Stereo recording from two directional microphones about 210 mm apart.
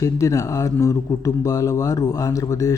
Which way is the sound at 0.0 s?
15° left (ahead or behind).